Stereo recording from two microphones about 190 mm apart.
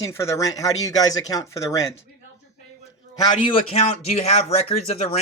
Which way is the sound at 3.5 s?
30° left (ahead or behind).